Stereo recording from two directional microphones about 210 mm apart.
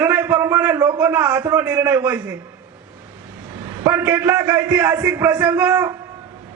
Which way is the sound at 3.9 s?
10° right (ahead or behind).